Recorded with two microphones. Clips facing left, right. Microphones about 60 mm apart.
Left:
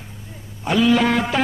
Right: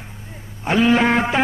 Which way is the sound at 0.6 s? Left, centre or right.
Right.